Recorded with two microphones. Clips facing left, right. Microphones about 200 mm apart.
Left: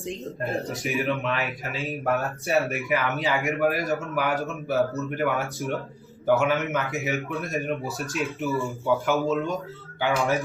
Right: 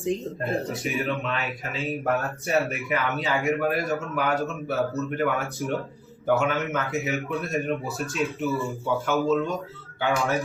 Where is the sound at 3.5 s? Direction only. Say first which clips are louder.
Even; centre (ahead or behind).